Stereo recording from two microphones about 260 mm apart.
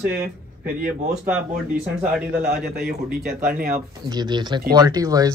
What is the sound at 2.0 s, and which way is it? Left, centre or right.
Speech, centre.